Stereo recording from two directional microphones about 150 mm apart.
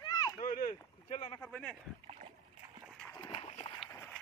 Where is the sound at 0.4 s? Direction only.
65° left (ahead or behind).